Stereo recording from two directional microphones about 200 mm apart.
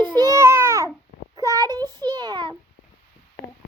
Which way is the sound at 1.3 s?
20° right (ahead or behind).